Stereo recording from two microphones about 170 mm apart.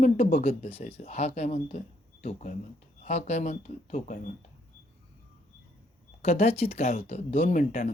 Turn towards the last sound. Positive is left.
turn(degrees=50)  # may be behind; listen again after turning